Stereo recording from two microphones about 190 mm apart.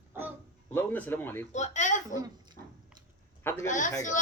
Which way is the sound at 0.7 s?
10° left (ahead or behind).